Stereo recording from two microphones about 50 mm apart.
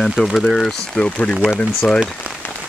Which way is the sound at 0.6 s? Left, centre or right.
Centre.